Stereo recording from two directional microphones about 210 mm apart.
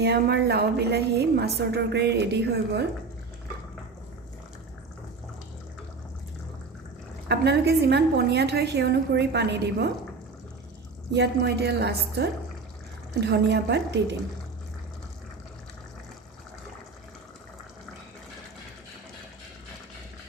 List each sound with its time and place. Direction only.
0.0 s a woman's voice: 50° right (ahead or behind)
7.3 s a woman's voice: 50° right (ahead or behind)
11.1 s a woman's voice: 50° right (ahead or behind)